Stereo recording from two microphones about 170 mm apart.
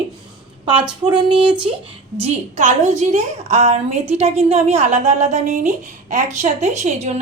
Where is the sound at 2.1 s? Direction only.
40° right (ahead or behind).